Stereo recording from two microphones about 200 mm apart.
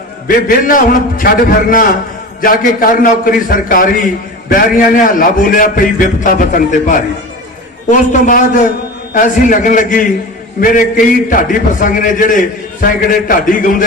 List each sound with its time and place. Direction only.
0.3 s a man's voice: 45° left (ahead or behind)
9.1 s a man's voice: 40° left (ahead or behind)